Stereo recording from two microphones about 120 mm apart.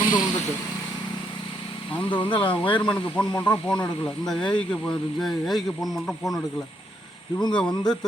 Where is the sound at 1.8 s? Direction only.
45° left (ahead or behind).